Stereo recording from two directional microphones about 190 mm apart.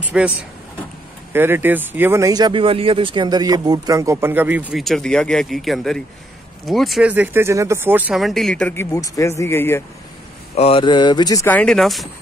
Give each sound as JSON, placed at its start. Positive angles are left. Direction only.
{"t": 0.0, "sound": "speech", "side_deg": -5}
{"t": 1.3, "sound": "speech", "side_deg": -10}
{"t": 10.5, "sound": "speech", "side_deg": 30}